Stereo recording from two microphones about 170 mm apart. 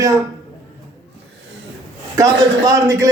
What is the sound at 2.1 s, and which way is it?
Speech, 20° right (ahead or behind).